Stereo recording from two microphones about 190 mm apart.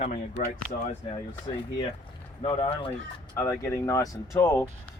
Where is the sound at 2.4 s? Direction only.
30° left (ahead or behind).